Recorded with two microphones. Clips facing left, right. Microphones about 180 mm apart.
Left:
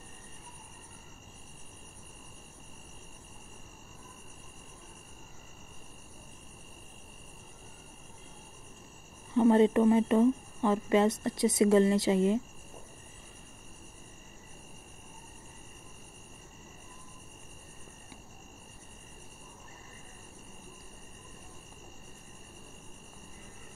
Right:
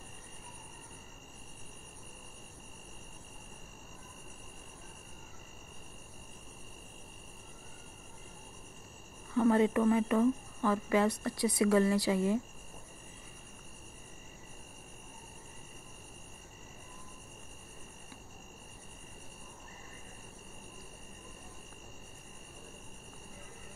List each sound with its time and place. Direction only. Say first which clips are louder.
9.3 s speech: left 4 dB; 25° left (ahead or behind)